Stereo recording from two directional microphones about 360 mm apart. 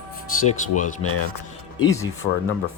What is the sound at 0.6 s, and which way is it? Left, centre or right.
Speech, left.